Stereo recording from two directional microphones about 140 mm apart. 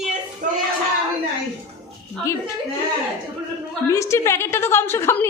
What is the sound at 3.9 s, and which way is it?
A woman's voice, 20° left (ahead or behind).